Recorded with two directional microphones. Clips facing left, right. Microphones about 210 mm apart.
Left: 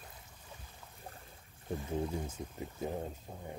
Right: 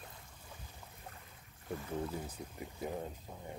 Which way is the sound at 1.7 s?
25° left (ahead or behind).